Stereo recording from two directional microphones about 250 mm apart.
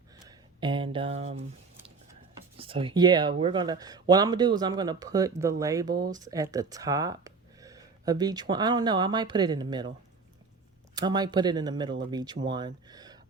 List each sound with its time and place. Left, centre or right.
0.3 s a sound: centre
2.6 s speech: right
10.9 s speech: centre